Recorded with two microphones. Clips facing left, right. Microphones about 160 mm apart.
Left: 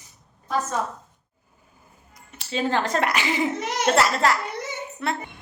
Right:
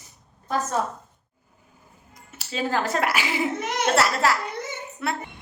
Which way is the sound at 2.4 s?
5° right (ahead or behind).